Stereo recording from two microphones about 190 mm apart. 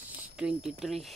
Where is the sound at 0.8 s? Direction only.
Centre (ahead or behind).